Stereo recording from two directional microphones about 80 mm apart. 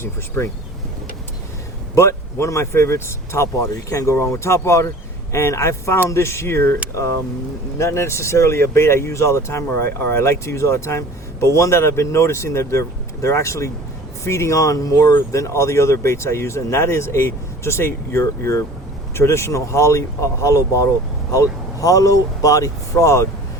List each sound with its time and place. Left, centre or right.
0.0 s speech: left
2.0 s speech: left